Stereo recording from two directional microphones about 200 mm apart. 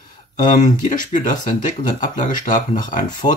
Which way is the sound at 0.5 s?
40° left (ahead or behind).